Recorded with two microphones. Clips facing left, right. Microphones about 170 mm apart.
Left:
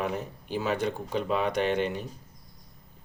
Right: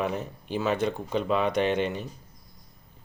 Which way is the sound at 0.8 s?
60° right (ahead or behind).